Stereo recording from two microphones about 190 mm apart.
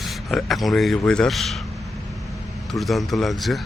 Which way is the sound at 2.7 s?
Centre (ahead or behind).